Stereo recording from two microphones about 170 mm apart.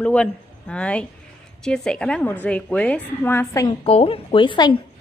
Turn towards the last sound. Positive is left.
turn(degrees=30)  # may be behind; listen again after turning